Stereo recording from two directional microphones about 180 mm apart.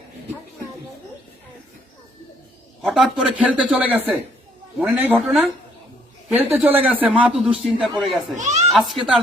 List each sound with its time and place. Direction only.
2.8 s a man's voice: centre (ahead or behind)
8.4 s a child's voice: 40° right (ahead or behind)
8.7 s speech: centre (ahead or behind)